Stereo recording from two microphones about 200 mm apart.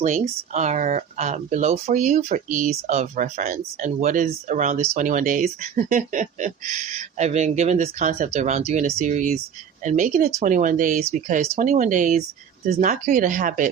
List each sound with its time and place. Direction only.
0.0 s speech: 35° right (ahead or behind)